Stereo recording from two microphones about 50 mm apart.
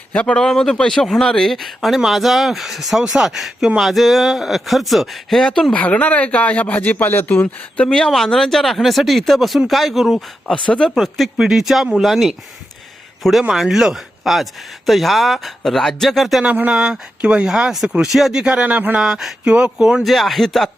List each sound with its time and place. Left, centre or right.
0.1 s speech: centre
0.4 s speech: centre
5.7 s speech: left
7.4 s speech: centre
8.0 s speech: centre
10.4 s speech: centre
13.5 s speech: centre
16.6 s speech: centre
17.7 s speech: centre
18.6 s speech: right
18.9 s speech: centre
20.1 s speech: centre